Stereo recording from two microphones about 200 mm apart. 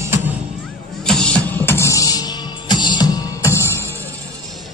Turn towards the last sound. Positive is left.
turn(degrees=15)  # may be behind; listen again after turning